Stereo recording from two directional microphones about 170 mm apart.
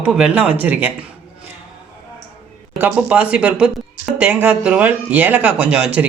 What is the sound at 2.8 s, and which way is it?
Speech, 10° right (ahead or behind).